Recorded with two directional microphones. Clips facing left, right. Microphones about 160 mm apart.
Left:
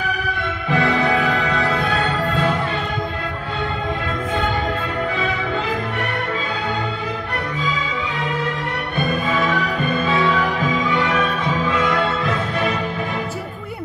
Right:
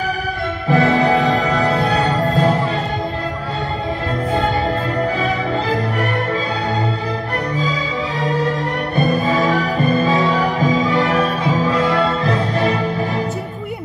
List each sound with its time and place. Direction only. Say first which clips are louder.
0.7 s music: right 4 dB; 35° right (ahead or behind)
8.2 s music: right 7 dB; 35° right (ahead or behind)